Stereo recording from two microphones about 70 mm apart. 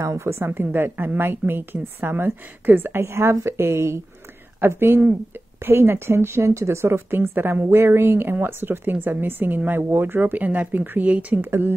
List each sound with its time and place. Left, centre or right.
0.0 s a woman's voice: right